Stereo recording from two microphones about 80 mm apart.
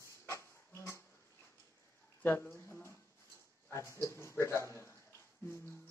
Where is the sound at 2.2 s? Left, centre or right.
Left.